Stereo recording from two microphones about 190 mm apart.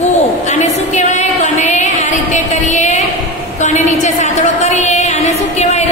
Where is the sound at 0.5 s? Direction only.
40° left (ahead or behind).